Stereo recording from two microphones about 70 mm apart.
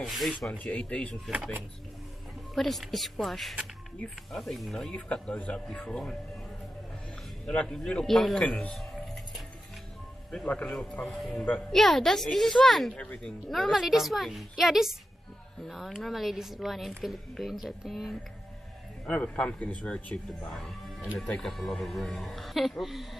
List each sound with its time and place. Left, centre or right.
0.0 s a woman's voice: centre
0.7 s a man's voice: centre
1.3 s speech: centre
2.5 s a woman's voice: centre
7.4 s a man's voice: centre
8.5 s speech: centre
8.7 s keys jangling: centre
10.3 s a man's voice: centre
11.1 s a woman's voice: centre
12.9 s a man's voice: centre
13.5 s a woman's voice: centre
19.0 s a man's voice: centre